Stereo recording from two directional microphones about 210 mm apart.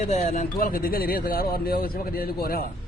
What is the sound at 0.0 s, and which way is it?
Speech, 35° left (ahead or behind).